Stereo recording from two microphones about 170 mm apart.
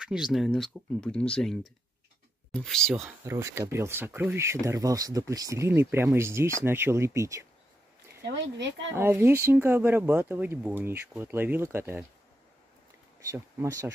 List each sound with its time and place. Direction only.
0.0 s speech: 5° right (ahead or behind)
3.3 s speech: 15° right (ahead or behind)
8.2 s speech: 90° right
8.9 s speech: 15° right (ahead or behind)
13.3 s speech: 20° right (ahead or behind)